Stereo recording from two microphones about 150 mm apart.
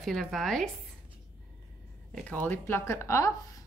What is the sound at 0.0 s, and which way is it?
Speech, centre (ahead or behind).